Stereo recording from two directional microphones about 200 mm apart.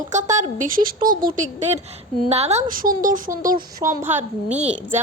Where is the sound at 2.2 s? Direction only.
30° right (ahead or behind).